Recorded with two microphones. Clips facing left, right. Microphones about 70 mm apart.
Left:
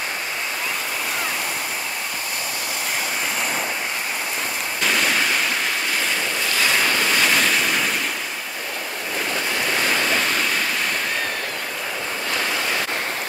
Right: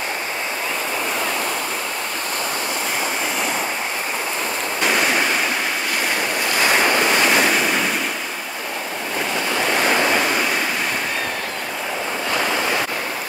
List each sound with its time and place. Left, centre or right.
4.8 s ocean: centre
6.6 s waves: right
9.7 s waves: right